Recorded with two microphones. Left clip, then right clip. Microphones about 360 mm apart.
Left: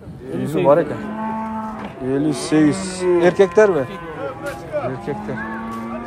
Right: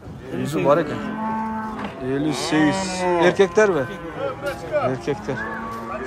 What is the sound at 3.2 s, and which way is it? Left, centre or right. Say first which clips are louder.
Speech: left 3 dB; centre.